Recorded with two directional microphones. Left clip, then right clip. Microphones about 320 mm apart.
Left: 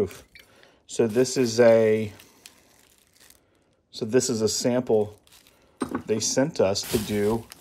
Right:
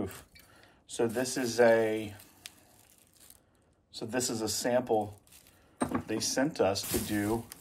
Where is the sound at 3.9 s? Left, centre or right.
Left.